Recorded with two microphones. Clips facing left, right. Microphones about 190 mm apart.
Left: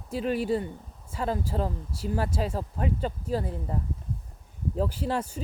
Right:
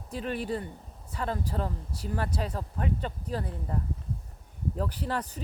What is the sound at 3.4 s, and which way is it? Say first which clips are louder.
Speech: left 3 dB; 25° left (ahead or behind).